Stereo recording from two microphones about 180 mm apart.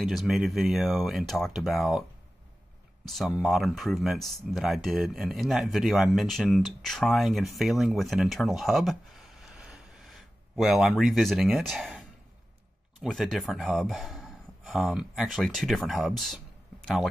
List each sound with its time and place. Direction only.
0.0 s speech: centre (ahead or behind)
3.1 s speech: centre (ahead or behind)